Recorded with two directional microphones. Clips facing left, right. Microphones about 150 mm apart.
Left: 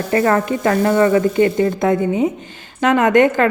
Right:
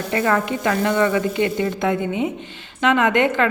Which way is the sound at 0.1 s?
40° left (ahead or behind).